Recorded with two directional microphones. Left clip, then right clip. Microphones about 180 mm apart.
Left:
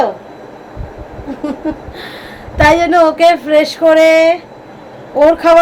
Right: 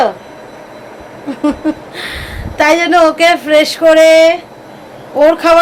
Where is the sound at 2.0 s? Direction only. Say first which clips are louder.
Right 5 dB; 5° right (ahead or behind).